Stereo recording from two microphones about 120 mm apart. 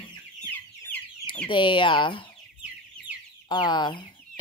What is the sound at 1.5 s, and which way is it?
Speech, 40° left (ahead or behind).